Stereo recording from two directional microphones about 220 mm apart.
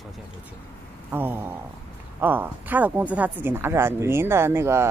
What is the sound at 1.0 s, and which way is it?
Speech, 10° right (ahead or behind).